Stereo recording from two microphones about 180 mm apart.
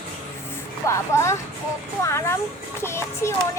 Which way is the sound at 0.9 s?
15° left (ahead or behind).